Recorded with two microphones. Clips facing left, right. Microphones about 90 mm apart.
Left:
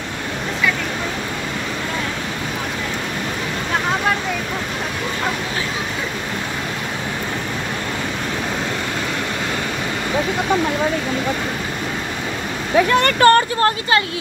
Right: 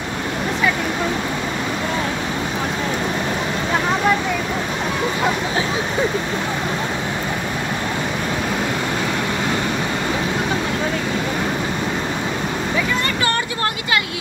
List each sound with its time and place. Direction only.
12.7 s speech: 65° left (ahead or behind); by 13.7 s 45° left (ahead or behind)